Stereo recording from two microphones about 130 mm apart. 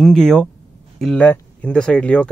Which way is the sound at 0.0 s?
5° left (ahead or behind).